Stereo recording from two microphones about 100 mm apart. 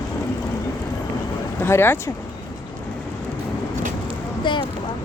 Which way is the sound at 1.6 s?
25° left (ahead or behind).